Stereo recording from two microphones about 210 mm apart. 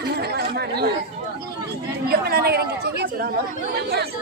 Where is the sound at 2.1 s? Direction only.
50° right (ahead or behind).